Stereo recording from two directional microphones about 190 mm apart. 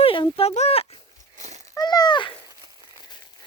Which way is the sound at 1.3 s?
40° right (ahead or behind).